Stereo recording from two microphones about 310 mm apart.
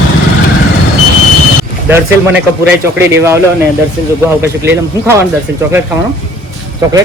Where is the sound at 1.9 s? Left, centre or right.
Centre.